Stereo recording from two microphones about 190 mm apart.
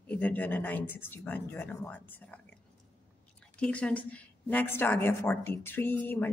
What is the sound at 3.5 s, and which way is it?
Speech, 5° left (ahead or behind).